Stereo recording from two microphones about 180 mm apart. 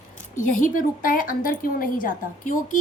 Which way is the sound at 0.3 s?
50° left (ahead or behind).